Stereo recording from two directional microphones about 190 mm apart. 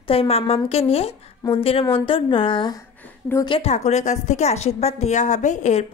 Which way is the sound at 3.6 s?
35° left (ahead or behind).